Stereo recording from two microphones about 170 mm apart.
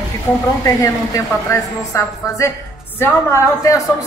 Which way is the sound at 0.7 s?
20° left (ahead or behind).